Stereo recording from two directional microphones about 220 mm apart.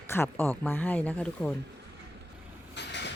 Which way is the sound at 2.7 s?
50° left (ahead or behind).